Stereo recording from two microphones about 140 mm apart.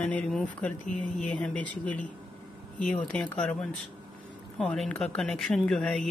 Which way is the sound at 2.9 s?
10° left (ahead or behind).